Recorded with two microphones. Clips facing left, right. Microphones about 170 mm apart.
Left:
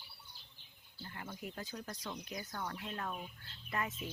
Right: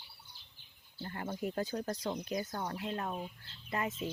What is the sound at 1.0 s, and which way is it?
Speech, 45° right (ahead or behind).